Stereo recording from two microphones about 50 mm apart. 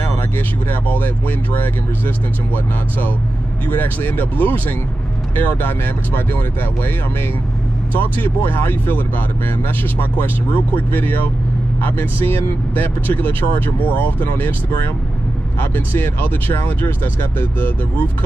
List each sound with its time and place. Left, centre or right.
0.7 s speech: left
7.9 s speech: left